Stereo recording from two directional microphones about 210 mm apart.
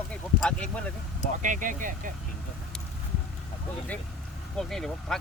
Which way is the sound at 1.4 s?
40° right (ahead or behind).